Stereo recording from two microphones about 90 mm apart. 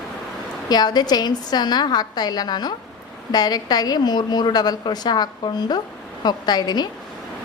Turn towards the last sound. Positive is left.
turn(degrees=50)  # may be behind; listen again after turning